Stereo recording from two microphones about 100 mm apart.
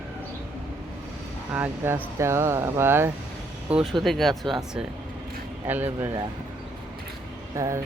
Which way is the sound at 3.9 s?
Centre (ahead or behind).